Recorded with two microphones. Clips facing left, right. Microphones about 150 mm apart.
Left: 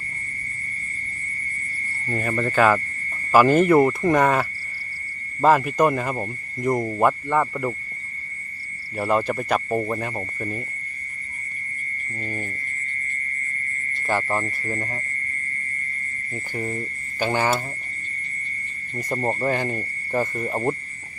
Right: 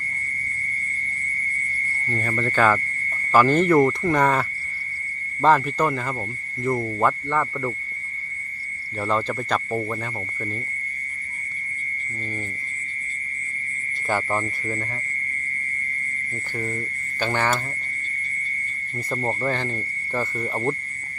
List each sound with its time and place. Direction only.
2.0 s speech: 10° left (ahead or behind)
9.0 s speech: 10° left (ahead or behind)
12.2 s speech: 15° left (ahead or behind)
14.1 s speech: centre (ahead or behind)
14.7 s speech: 30° left (ahead or behind)
16.3 s speech: 15° left (ahead or behind)
18.9 s speech: 15° left (ahead or behind)